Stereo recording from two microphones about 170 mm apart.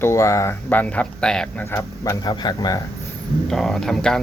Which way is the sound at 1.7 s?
20° left (ahead or behind).